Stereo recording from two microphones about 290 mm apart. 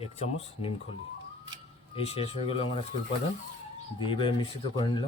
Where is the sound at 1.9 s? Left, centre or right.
Centre.